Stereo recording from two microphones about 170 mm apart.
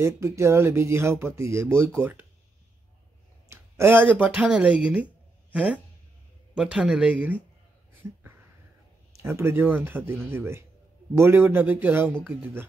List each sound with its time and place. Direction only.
0.0 s speech: 15° right (ahead or behind)
3.4 s speech: 15° right (ahead or behind)
9.1 s speech: 15° right (ahead or behind)